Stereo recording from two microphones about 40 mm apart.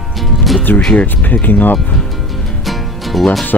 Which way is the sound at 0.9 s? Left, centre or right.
Left.